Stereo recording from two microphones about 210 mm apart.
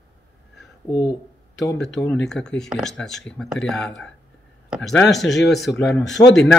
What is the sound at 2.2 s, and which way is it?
Speech, 5° left (ahead or behind).